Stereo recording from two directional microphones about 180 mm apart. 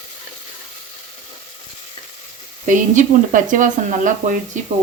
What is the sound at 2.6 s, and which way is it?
Speech, 45° right (ahead or behind).